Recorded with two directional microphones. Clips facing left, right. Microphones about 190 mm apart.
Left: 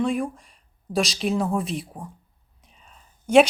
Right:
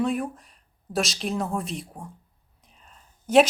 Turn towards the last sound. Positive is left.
turn(degrees=0)  # may be behind; listen again after turning